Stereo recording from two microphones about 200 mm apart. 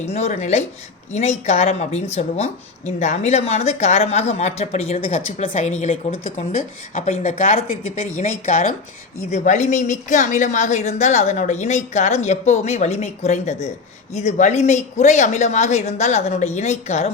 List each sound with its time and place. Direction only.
0.1 s a woman's voice: 35° left (ahead or behind)